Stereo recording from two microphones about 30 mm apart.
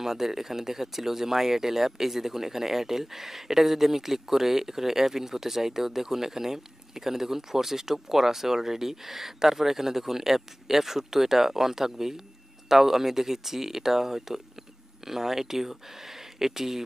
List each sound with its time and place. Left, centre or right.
0.0 s speech: centre